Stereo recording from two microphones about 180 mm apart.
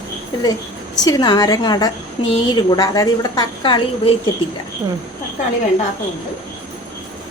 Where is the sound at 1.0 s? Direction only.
20° left (ahead or behind).